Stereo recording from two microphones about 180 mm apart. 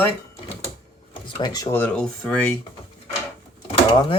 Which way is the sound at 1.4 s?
20° left (ahead or behind).